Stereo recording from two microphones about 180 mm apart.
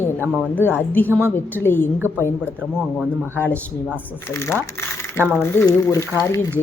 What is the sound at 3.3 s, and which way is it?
Speech, 10° left (ahead or behind).